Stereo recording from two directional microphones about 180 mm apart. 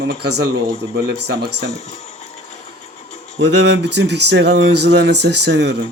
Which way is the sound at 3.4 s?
70° right (ahead or behind).